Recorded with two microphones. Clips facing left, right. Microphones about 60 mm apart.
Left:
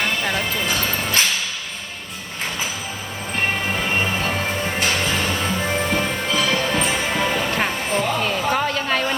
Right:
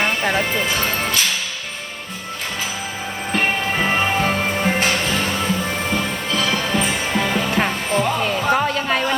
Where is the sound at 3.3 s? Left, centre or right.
Right.